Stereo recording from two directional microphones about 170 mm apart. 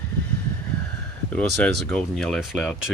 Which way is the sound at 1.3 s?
5° left (ahead or behind).